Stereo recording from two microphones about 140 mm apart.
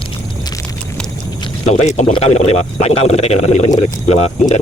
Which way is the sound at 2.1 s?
50° left (ahead or behind).